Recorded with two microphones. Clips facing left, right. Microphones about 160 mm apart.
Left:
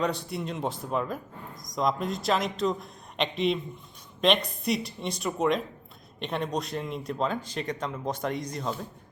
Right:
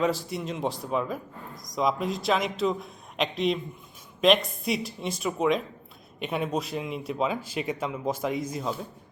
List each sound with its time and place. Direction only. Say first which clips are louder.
0.0 s speech: right 2 dB; centre (ahead or behind)